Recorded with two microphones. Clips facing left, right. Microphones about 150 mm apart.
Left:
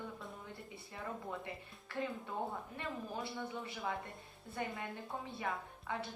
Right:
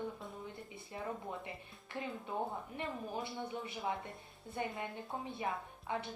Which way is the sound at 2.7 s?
20° right (ahead or behind).